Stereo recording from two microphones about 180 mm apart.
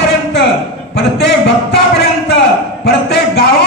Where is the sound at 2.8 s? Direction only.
65° left (ahead or behind).